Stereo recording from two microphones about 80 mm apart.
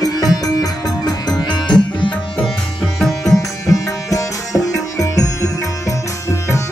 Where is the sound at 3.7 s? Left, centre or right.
Left.